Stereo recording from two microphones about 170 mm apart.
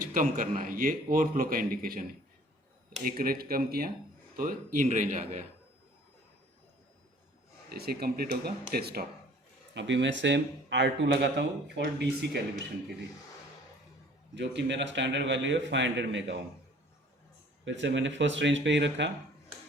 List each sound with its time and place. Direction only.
0.0 s a man's voice: 50° right (ahead or behind)
7.7 s speech: 65° right (ahead or behind)
9.7 s speech: 90° right
14.3 s speech: 90° right
17.7 s speech: 90° right